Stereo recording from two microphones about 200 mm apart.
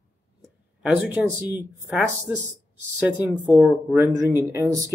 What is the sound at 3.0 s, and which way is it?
Speech, 10° right (ahead or behind).